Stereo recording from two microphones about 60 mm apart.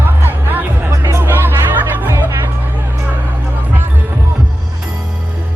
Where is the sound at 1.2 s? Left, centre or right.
Right.